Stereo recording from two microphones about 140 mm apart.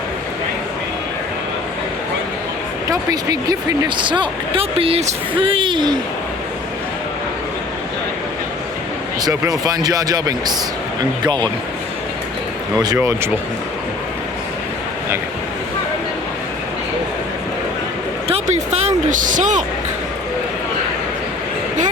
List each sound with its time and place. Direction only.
2.9 s speech: 25° right (ahead or behind)
9.2 s speech: 25° right (ahead or behind)
13.0 s speech: 15° right (ahead or behind)
18.3 s a sound: 50° right (ahead or behind)